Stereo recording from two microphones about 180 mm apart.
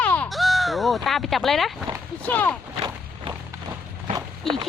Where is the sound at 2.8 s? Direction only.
25° right (ahead or behind).